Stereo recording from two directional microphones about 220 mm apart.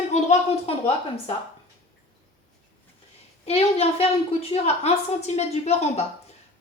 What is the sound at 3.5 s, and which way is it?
A woman's voice, 25° left (ahead or behind).